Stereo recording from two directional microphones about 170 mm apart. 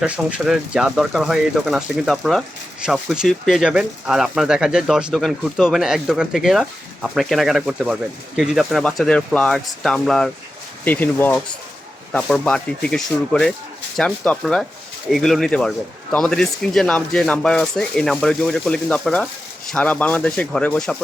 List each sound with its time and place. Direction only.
0.0 s speech: 5° right (ahead or behind)